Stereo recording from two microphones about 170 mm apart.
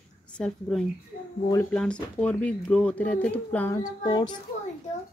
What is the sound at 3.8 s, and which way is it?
Child singing, 25° left (ahead or behind).